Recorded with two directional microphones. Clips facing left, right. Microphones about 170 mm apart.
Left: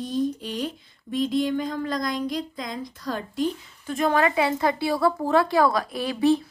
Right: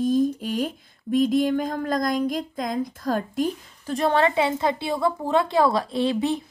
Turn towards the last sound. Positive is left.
turn(degrees=-20)  # may be behind; listen again after turning